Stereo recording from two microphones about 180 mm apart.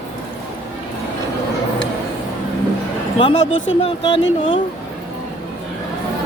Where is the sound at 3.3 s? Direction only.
90° left.